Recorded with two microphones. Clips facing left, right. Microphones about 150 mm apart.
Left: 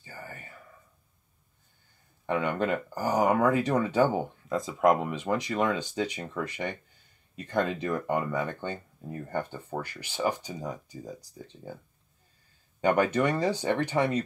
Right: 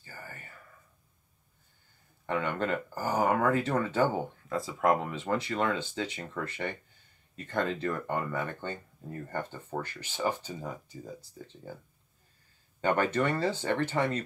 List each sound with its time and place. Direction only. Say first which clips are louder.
0.0 s whispering: left 3 dB; 20° left (ahead or behind)
2.2 s speech: left 3 dB; 15° left (ahead or behind)
12.8 s speech: left 3 dB; 15° left (ahead or behind)